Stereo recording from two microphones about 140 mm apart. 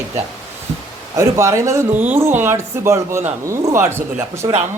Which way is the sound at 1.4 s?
20° right (ahead or behind).